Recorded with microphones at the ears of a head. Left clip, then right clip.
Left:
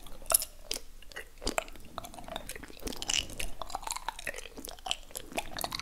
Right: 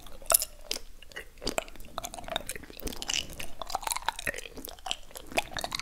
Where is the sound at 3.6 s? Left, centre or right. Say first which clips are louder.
Right 8 dB; right.